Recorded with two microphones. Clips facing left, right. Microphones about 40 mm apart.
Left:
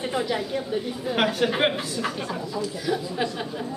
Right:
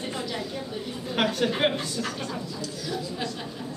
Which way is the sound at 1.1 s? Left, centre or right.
Centre.